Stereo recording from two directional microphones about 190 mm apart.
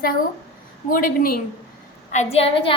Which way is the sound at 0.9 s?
50° left (ahead or behind).